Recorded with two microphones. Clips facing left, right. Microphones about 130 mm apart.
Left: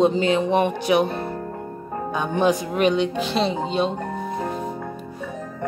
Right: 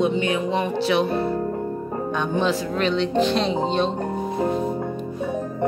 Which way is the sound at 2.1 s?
10° left (ahead or behind).